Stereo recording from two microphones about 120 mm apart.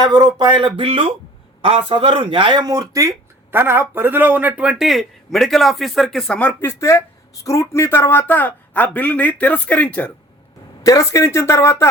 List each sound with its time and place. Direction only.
0.0 s speech: 35° right (ahead or behind); by 10.1 s 10° left (ahead or behind)
10.8 s speech: 25° left (ahead or behind)